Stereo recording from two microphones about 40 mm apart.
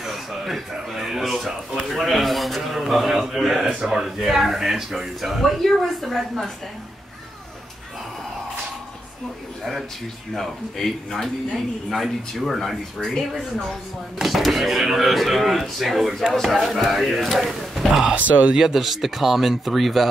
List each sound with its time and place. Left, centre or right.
0.0 s a sound: centre
1.9 s a man's voice: centre
5.6 s a man's voice: centre
10.3 s a man's voice: centre
18.1 s speech: right
18.6 s a man's voice: centre